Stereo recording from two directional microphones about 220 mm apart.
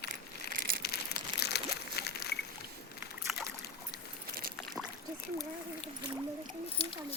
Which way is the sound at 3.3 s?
5° right (ahead or behind).